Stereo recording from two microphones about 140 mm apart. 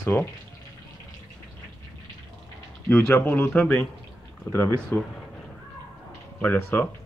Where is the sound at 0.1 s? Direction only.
15° left (ahead or behind).